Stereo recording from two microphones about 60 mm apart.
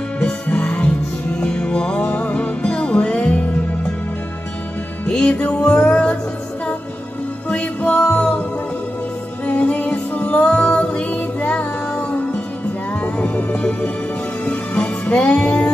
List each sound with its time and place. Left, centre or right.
0.2 s music: left
5.0 s music: centre
7.4 s music: left
9.6 s music: left